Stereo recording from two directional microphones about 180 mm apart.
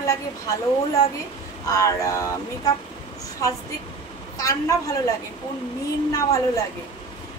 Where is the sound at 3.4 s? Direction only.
20° left (ahead or behind).